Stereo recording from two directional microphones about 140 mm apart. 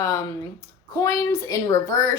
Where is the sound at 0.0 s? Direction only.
20° left (ahead or behind).